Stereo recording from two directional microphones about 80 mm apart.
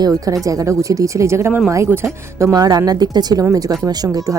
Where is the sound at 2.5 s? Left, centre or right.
Right.